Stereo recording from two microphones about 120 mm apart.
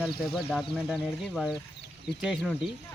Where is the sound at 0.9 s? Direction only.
15° left (ahead or behind).